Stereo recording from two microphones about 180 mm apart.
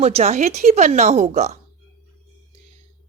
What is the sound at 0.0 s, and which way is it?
A woman's voice, 35° right (ahead or behind).